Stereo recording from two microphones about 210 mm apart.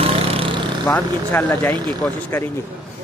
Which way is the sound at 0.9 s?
10° left (ahead or behind).